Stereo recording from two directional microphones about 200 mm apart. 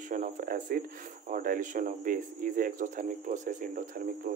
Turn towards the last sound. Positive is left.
turn(degrees=-45)  # may be behind; listen again after turning